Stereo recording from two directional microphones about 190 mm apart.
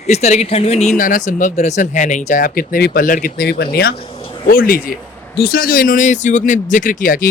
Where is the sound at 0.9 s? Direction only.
45° left (ahead or behind).